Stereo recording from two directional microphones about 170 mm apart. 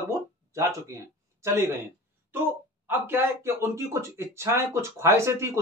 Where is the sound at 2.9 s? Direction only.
15° right (ahead or behind).